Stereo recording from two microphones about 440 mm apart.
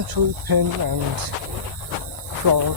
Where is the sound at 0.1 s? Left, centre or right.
Right.